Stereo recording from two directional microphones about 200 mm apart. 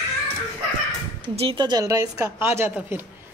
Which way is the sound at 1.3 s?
30° right (ahead or behind).